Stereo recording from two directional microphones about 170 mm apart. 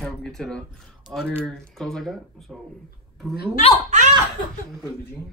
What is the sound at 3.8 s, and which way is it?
Speech, 45° right (ahead or behind).